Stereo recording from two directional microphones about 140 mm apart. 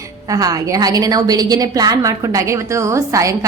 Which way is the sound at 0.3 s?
25° right (ahead or behind).